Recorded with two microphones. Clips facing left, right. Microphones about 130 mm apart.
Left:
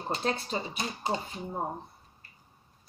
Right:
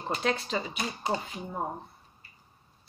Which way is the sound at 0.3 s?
30° left (ahead or behind).